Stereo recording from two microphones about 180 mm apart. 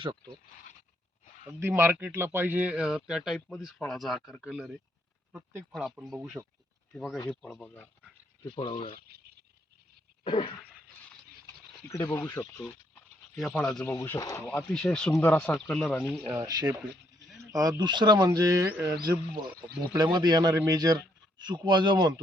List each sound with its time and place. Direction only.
1.2 s a sound: 45° left (ahead or behind)
1.5 s a man's voice: 15° right (ahead or behind); by 7.9 s 10° left (ahead or behind)
8.4 s speech: 25° left (ahead or behind)
9.0 s a sound: 60° right (ahead or behind)
10.2 s speech: 25° left (ahead or behind)
11.9 s speech: 20° left (ahead or behind); by 13.9 s 5° left (ahead or behind)
13.9 s speech: 15° left (ahead or behind)
16.3 s a man's voice: 20° right (ahead or behind)